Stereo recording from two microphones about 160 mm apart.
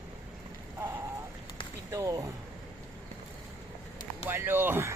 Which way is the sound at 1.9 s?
20° right (ahead or behind).